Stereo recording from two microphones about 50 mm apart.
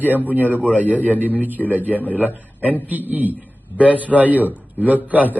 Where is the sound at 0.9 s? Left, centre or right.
Left.